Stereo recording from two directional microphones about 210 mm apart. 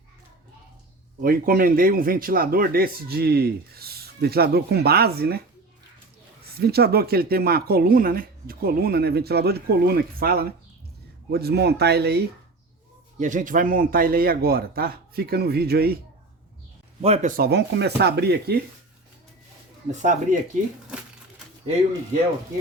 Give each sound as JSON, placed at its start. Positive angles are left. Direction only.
{"t": 1.2, "sound": "a man's voice", "side_deg": -45}
{"t": 6.4, "sound": "a man's voice", "side_deg": -50}
{"t": 13.1, "sound": "a man's voice", "side_deg": -35}
{"t": 17.0, "sound": "speech", "side_deg": -30}
{"t": 17.3, "sound": "a man's voice", "side_deg": -50}
{"t": 20.0, "sound": "speech", "side_deg": -35}